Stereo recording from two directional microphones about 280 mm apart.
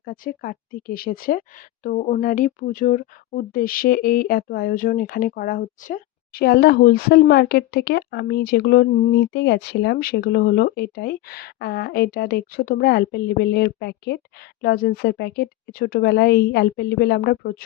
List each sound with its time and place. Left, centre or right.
0.0 s speech: left